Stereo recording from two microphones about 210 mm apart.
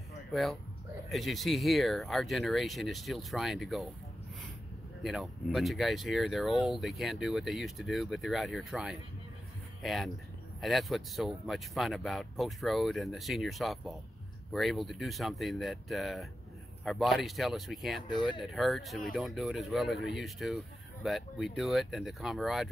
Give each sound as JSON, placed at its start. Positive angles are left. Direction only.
{"t": 0.3, "sound": "speech", "side_deg": 0}
{"t": 5.0, "sound": "speech", "side_deg": 0}
{"t": 18.0, "sound": "speech", "side_deg": 20}
{"t": 18.4, "sound": "speech", "side_deg": 0}